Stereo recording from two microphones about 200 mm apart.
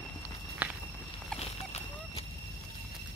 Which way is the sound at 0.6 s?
10° right (ahead or behind).